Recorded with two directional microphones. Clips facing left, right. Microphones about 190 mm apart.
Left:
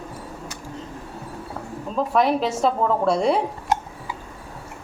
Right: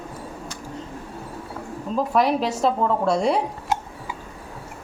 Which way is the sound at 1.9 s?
Centre (ahead or behind).